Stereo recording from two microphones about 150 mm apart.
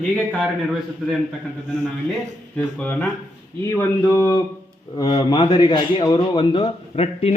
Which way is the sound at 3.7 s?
20° left (ahead or behind).